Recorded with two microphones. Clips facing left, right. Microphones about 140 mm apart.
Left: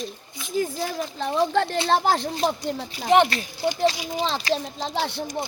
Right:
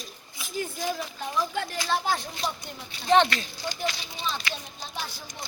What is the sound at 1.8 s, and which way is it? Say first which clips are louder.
Speech: left 4 dB; 90° left.